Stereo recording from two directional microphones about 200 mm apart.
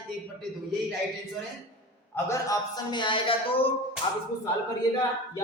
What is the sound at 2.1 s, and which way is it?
Speech, 15° left (ahead or behind).